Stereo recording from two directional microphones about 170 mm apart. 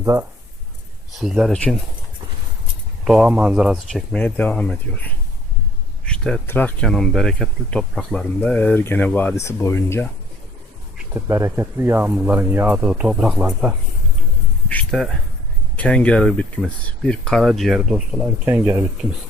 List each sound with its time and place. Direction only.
0.0 s speech: 20° right (ahead or behind)
1.2 s speech: centre (ahead or behind)
3.0 s speech: 5° right (ahead or behind)
4.1 s speech: 5° left (ahead or behind)
11.1 s speech: 15° right (ahead or behind)
14.7 s a sound: 5° left (ahead or behind)
15.7 s speech: 5° left (ahead or behind); by 18.9 s 10° right (ahead or behind)